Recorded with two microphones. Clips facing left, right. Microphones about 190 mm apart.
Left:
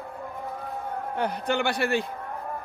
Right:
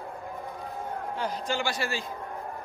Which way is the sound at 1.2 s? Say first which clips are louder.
Left 5 dB; 60° left (ahead or behind).